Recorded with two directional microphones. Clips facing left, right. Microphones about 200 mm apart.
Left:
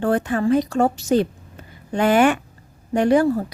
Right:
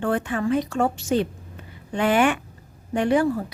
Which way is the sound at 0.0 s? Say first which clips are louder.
Left 4 dB; 40° left (ahead or behind).